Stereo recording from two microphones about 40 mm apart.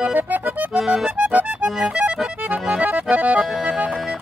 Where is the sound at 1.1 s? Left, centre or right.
Right.